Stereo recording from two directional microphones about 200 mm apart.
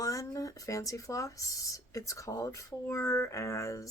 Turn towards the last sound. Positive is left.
turn(degrees=15)  # may be behind; listen again after turning